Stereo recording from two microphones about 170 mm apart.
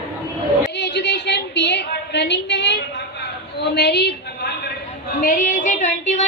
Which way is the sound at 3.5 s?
80° left.